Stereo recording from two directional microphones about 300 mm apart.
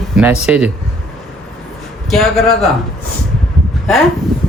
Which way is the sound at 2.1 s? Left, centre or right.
Centre.